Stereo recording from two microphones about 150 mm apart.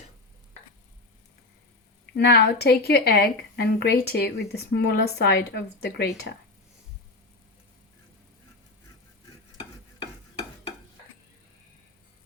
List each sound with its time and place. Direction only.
2.1 s a woman's voice: 90° left